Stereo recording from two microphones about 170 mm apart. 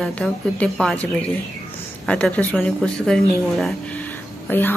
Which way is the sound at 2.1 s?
5° left (ahead or behind).